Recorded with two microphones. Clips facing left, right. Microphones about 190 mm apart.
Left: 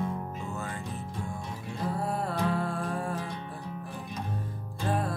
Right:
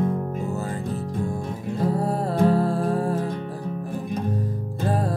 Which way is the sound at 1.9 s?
35° right (ahead or behind).